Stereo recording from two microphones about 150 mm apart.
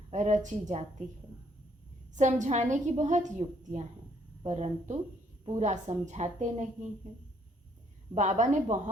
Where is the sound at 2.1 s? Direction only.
55° right (ahead or behind).